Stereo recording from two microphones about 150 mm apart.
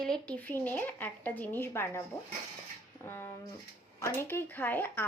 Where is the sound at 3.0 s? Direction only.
15° left (ahead or behind).